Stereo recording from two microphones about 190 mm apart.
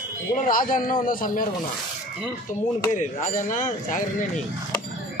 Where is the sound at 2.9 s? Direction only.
40° left (ahead or behind).